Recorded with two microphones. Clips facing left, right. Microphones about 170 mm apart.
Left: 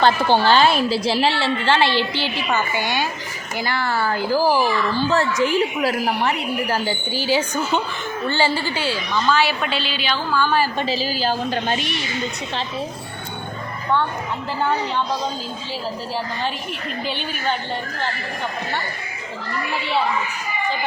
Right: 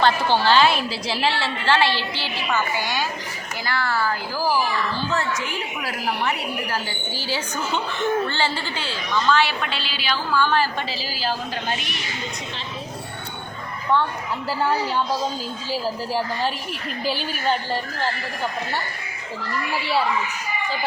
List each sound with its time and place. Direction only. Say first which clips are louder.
0.0 s a woman's voice: left 3 dB; 50° left (ahead or behind)
0.9 s a woman's voice: left 5 dB; 30° left (ahead or behind)
4.4 s speech: left 4 dB; 60° left (ahead or behind)
5.1 s a woman's voice: left 7 dB; 30° left (ahead or behind)
7.1 s a woman's voice: left 7 dB; 15° left (ahead or behind)
10.8 s a woman's voice: left 6 dB; 25° left (ahead or behind)
14.6 s a woman's voice: left 1 dB; 5° right (ahead or behind)